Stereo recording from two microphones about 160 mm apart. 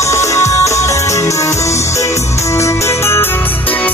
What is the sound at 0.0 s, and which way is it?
Music, 20° left (ahead or behind).